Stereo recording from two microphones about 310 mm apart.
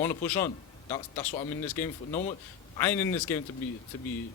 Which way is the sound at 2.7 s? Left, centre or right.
Centre.